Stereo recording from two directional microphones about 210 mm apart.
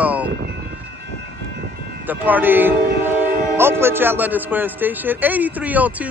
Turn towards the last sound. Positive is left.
turn(degrees=-5)  # may be behind; listen again after turning